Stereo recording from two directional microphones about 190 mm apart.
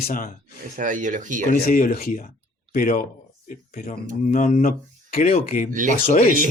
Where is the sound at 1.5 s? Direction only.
50° left (ahead or behind).